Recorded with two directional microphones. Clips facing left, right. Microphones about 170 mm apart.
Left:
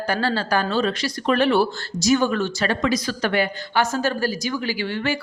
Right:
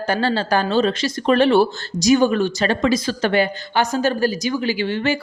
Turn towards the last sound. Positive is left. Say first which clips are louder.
# right 4 dB
turn(degrees=-20)  # may be behind; listen again after turning